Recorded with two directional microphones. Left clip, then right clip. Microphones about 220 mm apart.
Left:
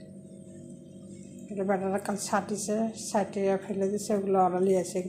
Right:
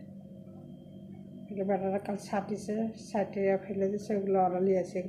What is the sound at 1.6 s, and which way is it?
A woman's voice, 10° left (ahead or behind).